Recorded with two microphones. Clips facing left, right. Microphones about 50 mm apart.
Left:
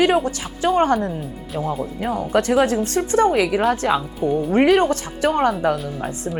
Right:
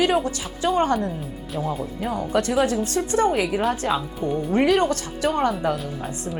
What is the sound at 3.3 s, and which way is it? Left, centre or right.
Speech, left.